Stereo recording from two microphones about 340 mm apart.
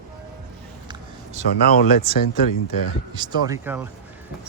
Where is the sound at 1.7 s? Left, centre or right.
Left.